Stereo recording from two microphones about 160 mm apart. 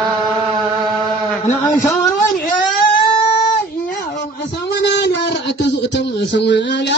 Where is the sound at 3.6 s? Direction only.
60° left (ahead or behind).